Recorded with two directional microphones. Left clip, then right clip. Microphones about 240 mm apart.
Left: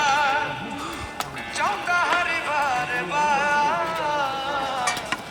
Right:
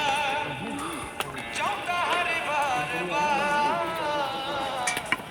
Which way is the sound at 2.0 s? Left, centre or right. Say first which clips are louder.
Left 1 dB; centre.